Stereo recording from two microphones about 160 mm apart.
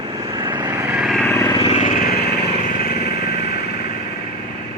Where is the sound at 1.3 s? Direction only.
15° left (ahead or behind).